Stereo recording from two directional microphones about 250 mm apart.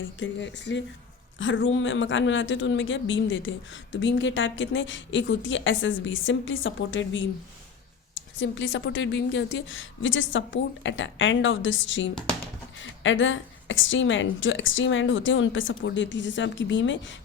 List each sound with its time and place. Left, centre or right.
0.2 s a man's voice: left
8.4 s a man's voice: left
12.1 s speech: centre
12.8 s a man's voice: left